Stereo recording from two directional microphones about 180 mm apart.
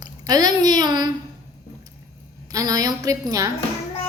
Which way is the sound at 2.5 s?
20° right (ahead or behind).